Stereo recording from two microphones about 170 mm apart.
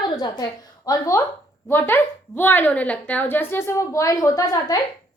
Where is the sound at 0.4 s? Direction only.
20° left (ahead or behind).